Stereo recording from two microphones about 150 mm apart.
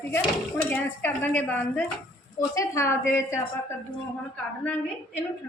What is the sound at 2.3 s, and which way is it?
A woman's voice, 20° left (ahead or behind).